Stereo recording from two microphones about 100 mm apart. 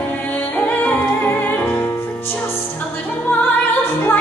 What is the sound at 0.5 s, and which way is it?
Music, 15° left (ahead or behind).